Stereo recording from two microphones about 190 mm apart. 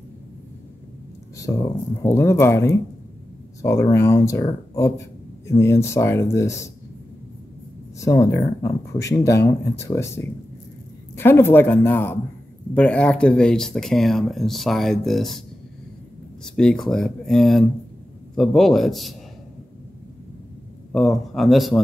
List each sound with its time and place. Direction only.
1.3 s speech: 15° left (ahead or behind)
8.0 s speech: 15° left (ahead or behind); by 15.4 s centre (ahead or behind)
16.4 s speech: 5° left (ahead or behind)
20.9 s speech: centre (ahead or behind)